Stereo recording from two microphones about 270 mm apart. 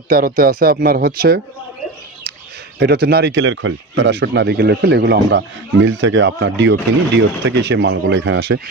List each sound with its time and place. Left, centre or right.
0.1 s speech: right
2.8 s speech: right